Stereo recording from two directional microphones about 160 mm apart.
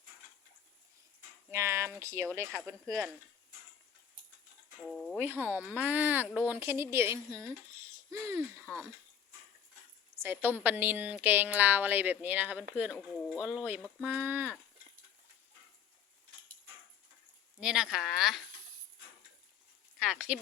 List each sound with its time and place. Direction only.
1.5 s speech: 15° right (ahead or behind)
2.6 s speech: 5° left (ahead or behind)
4.9 s speech: centre (ahead or behind)
5.4 s a woman's voice: 10° right (ahead or behind)
8.6 s speech: centre (ahead or behind)
10.2 s a woman's voice: 10° right (ahead or behind)
17.6 s speech: 5° right (ahead or behind)
20.0 s a woman's voice: 5° right (ahead or behind)